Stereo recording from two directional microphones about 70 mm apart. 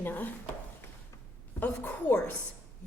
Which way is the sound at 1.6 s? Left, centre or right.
Left.